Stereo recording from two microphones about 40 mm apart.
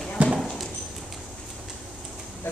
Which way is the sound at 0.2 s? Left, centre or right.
Right.